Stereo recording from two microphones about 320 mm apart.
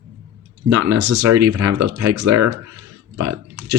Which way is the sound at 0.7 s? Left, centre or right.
Right.